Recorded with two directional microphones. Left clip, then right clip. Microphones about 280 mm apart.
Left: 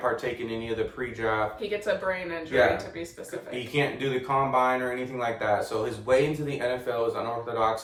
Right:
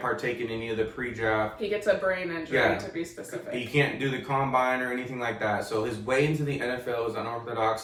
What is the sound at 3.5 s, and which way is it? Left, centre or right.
Speech, centre.